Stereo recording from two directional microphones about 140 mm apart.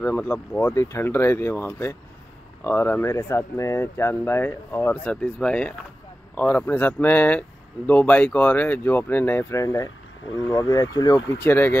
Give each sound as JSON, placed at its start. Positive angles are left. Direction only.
{"t": 0.0, "sound": "speech", "side_deg": 15}
{"t": 11.4, "sound": "speech", "side_deg": 15}